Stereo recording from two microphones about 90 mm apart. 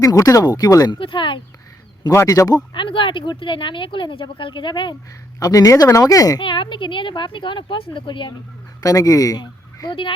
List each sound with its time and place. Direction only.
0.0 s speech: 40° left (ahead or behind)
0.9 s speech: 70° left (ahead or behind)
2.2 s speech: 40° left (ahead or behind)
2.7 s speech: 70° left (ahead or behind)
5.4 s speech: 40° left (ahead or behind)
6.4 s speech: 65° left (ahead or behind)
8.8 s speech: 40° left (ahead or behind)
9.9 s speech: 70° left (ahead or behind)